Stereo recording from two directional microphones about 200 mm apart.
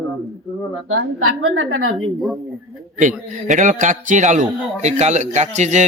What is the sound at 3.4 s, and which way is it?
Speech, 40° right (ahead or behind).